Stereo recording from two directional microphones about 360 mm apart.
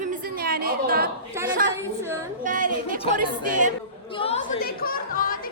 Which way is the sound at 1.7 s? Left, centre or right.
Centre.